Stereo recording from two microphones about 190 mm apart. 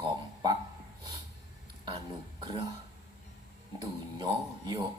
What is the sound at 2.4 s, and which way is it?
Speech, 25° right (ahead or behind).